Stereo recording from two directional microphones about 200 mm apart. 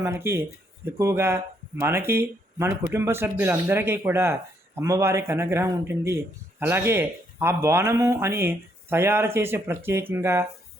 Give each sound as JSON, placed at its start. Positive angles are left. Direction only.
{"t": 0.0, "sound": "speech", "side_deg": -15}